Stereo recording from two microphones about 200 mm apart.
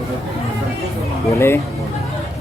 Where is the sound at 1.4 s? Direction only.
10° left (ahead or behind).